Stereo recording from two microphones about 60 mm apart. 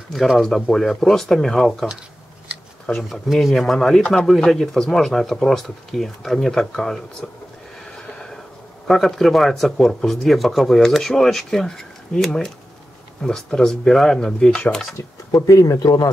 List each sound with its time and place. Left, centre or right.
0.1 s speech: centre
3.1 s speech: centre
7.8 s a sound: centre
8.8 s speech: centre
15.0 s speech: left